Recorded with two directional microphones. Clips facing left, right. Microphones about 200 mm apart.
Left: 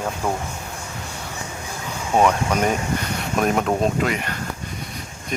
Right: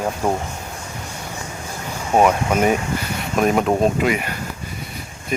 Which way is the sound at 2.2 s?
10° right (ahead or behind).